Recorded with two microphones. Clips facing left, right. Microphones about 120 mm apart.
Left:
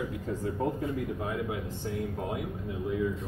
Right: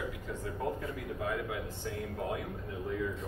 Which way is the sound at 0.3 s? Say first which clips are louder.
Left 6 dB; 30° left (ahead or behind).